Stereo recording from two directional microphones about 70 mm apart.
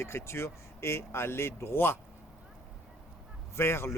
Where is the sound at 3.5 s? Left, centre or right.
Left.